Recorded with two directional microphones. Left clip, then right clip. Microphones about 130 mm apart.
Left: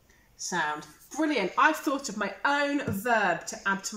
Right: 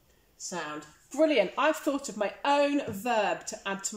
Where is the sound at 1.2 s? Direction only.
20° right (ahead or behind).